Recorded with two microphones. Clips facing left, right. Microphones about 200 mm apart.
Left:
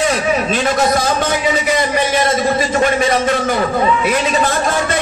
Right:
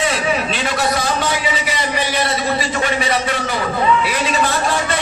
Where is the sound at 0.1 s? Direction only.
45° left (ahead or behind).